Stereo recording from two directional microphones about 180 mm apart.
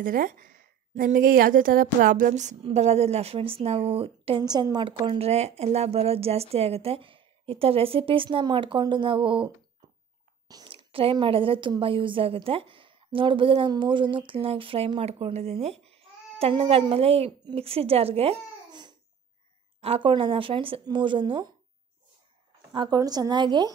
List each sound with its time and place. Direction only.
0.0 s a woman's voice: 50° right (ahead or behind); by 9.5 s 30° right (ahead or behind)
10.5 s a woman's voice: 25° right (ahead or behind)
22.7 s speech: 25° right (ahead or behind)